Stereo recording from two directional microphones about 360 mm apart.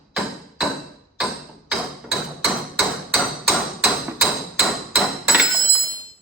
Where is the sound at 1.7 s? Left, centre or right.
Centre.